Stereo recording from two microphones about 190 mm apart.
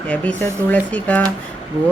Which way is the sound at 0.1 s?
5° left (ahead or behind).